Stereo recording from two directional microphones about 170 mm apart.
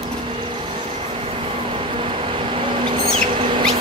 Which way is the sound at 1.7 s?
35° right (ahead or behind).